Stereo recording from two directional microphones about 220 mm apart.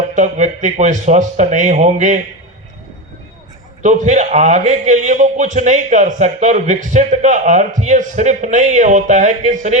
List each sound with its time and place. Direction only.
0.1 s a man's voice: 35° right (ahead or behind)
3.8 s a man's voice: 35° right (ahead or behind)